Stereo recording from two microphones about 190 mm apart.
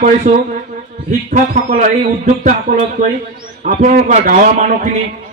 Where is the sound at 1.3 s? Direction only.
55° right (ahead or behind).